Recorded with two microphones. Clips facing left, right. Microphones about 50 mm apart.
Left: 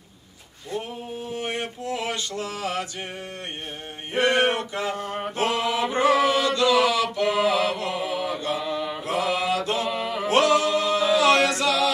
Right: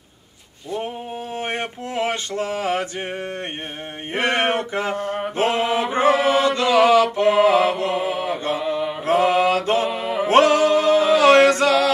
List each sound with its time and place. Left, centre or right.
1.4 s male singing: right
4.1 s a sound: right
5.4 s mantra: right
9.0 s mantra: right
9.9 s music: centre
10.2 s male singing: right